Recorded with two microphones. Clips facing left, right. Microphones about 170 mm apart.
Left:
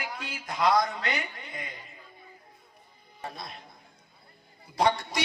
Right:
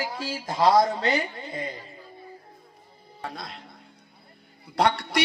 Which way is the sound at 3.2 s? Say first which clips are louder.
Right 3 dB; 90° right.